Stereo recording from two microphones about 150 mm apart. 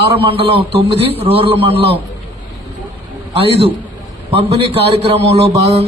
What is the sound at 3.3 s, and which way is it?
A man's voice, 40° right (ahead or behind).